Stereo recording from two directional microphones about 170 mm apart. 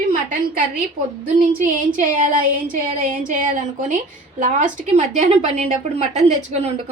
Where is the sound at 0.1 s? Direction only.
55° right (ahead or behind).